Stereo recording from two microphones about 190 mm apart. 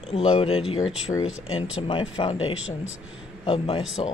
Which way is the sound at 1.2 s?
90° left.